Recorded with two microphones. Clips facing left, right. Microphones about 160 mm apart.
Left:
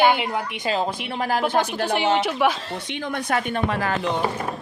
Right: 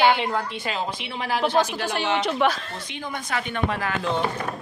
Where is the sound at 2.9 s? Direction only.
75° left (ahead or behind).